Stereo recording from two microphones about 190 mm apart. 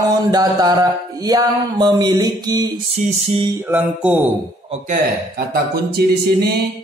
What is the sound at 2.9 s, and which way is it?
Music, 35° right (ahead or behind).